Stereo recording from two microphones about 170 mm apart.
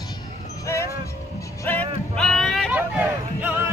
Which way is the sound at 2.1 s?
5° left (ahead or behind).